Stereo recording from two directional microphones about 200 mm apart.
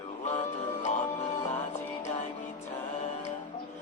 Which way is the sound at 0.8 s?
35° left (ahead or behind).